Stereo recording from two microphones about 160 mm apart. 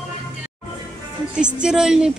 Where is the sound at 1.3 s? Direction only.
5° right (ahead or behind).